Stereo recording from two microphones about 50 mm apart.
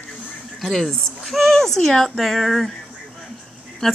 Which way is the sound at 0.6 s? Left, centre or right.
Centre.